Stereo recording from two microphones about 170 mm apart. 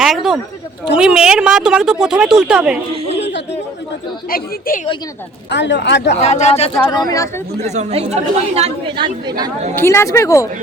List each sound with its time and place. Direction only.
0.0 s a sound: centre (ahead or behind)
0.9 s speech: 5° right (ahead or behind)
3.2 s chatter: 90° left
4.3 s a woman's voice: 60° left (ahead or behind)
5.5 s speech: 90° left
6.1 s speech: 40° left (ahead or behind)
6.8 s speech: 25° left (ahead or behind)
7.7 s speech: 40° right (ahead or behind)
9.7 s speech: 15° left (ahead or behind)